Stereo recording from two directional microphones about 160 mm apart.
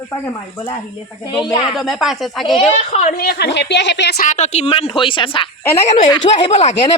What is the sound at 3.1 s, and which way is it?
Speech, 85° left.